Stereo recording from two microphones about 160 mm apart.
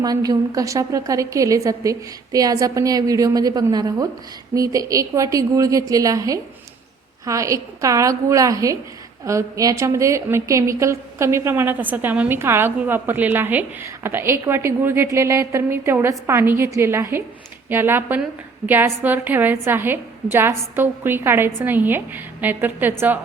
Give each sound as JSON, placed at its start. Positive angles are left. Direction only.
{"t": 0.0, "sound": "a woman's voice", "side_deg": -25}